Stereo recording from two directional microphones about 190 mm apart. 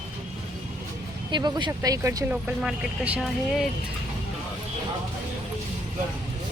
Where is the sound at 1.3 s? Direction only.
20° right (ahead or behind); by 3.6 s 5° right (ahead or behind).